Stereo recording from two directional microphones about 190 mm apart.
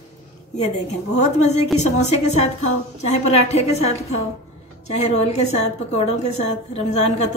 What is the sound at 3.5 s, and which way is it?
A woman's voice, 35° left (ahead or behind).